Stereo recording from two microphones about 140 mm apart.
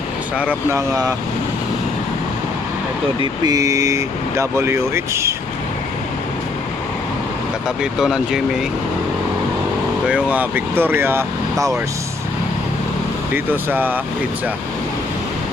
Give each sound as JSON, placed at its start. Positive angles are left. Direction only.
{"t": 0.3, "sound": "speech", "side_deg": -10}
{"t": 3.2, "sound": "speech", "side_deg": -25}
{"t": 7.8, "sound": "speech", "side_deg": -5}
{"t": 10.1, "sound": "speech", "side_deg": -10}
{"t": 13.3, "sound": "speech", "side_deg": -15}